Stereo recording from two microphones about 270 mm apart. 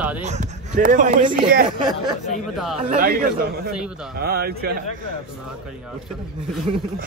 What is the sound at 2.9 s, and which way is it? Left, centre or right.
A man's voice, right.